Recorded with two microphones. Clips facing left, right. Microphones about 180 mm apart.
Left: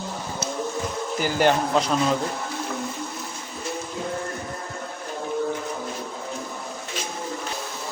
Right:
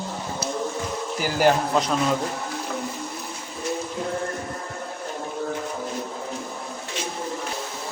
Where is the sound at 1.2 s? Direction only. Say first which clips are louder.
Right 1 dB; 5° right (ahead or behind).